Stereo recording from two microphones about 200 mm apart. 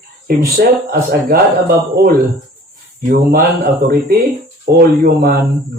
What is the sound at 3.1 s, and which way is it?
Speech, 50° right (ahead or behind).